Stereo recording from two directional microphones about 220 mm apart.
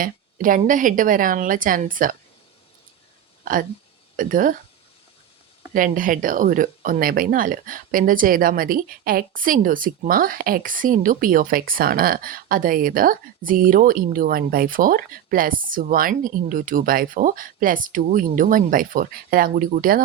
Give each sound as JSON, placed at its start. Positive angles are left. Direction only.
{"t": 0.0, "sound": "speech", "side_deg": -40}
{"t": 3.4, "sound": "speech", "side_deg": -40}
{"t": 5.7, "sound": "speech", "side_deg": -40}